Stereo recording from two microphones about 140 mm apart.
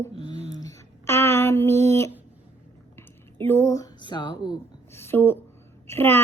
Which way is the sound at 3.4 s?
20° left (ahead or behind).